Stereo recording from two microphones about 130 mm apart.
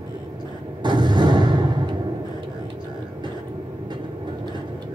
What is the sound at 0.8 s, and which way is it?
Artillery fire, 35° right (ahead or behind).